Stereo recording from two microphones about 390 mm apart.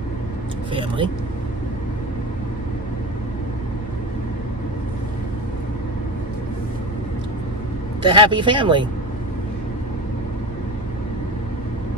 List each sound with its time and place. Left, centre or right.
0.7 s speech: centre
8.0 s speech: centre